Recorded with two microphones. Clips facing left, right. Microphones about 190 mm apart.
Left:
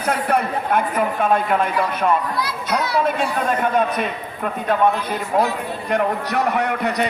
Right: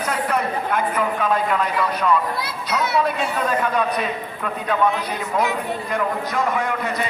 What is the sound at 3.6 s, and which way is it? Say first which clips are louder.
A woman's voice: left 2 dB; 45° left (ahead or behind).